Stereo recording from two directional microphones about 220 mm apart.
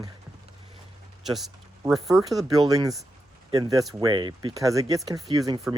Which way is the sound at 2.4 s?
15° right (ahead or behind).